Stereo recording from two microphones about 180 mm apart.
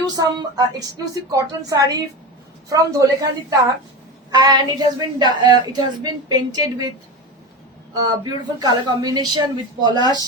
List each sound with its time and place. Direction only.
0.0 s speech: 20° right (ahead or behind)
4.3 s speech: 20° right (ahead or behind)
7.9 s speech: 20° right (ahead or behind)